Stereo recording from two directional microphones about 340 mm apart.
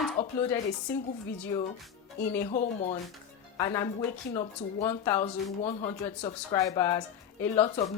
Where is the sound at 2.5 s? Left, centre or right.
Left.